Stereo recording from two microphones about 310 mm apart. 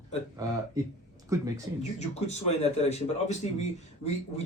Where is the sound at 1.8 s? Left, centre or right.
Left.